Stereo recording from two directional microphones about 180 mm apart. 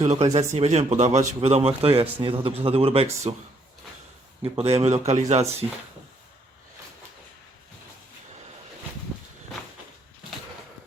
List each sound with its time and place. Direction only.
0.0 s a man's voice: 40° right (ahead or behind)
4.4 s a man's voice: 35° right (ahead or behind)